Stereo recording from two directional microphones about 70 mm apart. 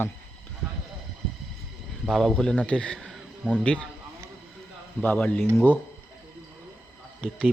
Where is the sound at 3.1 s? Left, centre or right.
Centre.